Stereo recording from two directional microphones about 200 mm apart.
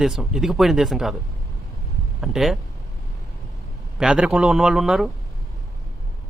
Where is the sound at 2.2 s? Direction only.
Centre (ahead or behind).